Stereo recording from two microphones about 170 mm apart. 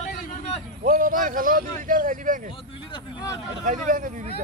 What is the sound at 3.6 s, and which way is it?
Speech, 50° right (ahead or behind).